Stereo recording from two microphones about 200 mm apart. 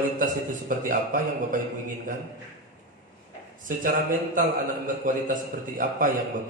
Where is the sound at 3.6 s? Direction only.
40° right (ahead or behind).